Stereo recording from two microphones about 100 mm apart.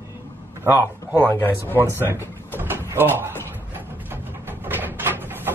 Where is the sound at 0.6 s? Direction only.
25° right (ahead or behind).